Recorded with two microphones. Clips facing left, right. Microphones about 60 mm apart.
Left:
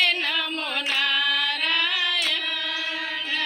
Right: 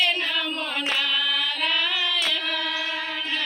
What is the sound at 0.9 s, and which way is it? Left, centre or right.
Singing, left.